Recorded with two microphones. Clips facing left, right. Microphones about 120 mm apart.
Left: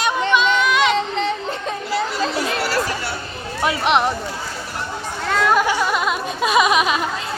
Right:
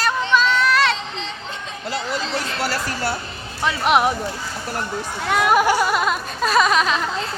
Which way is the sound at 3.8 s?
5° right (ahead or behind).